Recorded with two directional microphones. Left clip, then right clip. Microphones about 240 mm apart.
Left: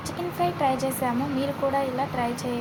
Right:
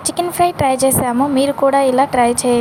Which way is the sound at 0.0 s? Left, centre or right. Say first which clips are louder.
Right 12 dB; right.